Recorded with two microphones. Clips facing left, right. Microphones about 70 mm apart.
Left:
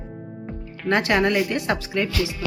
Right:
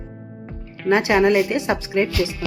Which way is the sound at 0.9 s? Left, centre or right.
Centre.